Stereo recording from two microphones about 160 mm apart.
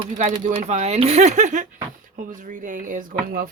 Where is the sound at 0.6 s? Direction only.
45° right (ahead or behind).